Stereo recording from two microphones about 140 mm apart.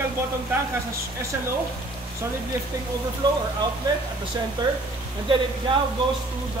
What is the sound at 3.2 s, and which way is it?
Speech, 30° right (ahead or behind).